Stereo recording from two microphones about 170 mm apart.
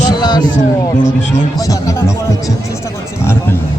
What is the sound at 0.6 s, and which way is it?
Speech, 45° left (ahead or behind).